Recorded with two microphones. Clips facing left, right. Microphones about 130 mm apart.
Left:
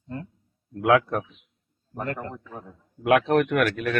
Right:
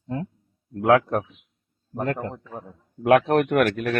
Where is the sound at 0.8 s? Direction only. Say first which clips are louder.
Right 2 dB; 40° right (ahead or behind).